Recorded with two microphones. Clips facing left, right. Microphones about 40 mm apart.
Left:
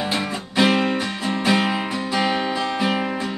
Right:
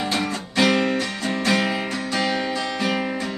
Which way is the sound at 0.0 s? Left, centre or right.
Centre.